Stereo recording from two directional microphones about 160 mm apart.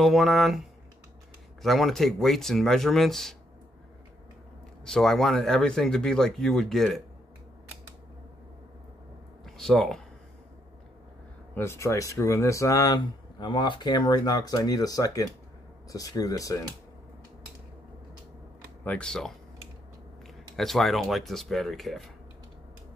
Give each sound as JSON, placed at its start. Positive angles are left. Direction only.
{"t": 0.0, "sound": "speech", "side_deg": 0}
{"t": 4.8, "sound": "speech", "side_deg": 5}
{"t": 9.4, "sound": "speech", "side_deg": 0}
{"t": 11.5, "sound": "speech", "side_deg": 15}
{"t": 18.9, "sound": "speech", "side_deg": 5}
{"t": 20.5, "sound": "speech", "side_deg": 0}